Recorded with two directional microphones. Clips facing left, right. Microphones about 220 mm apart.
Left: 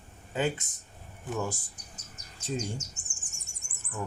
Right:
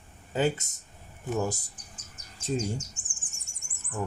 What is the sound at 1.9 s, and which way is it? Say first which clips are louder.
Insect: left 1 dB; 40° left (ahead or behind).